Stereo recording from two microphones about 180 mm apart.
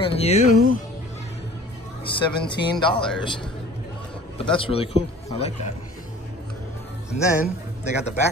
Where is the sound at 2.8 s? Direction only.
30° left (ahead or behind).